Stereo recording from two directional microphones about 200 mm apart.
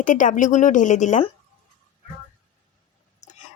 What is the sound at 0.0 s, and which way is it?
A woman's voice, 40° left (ahead or behind).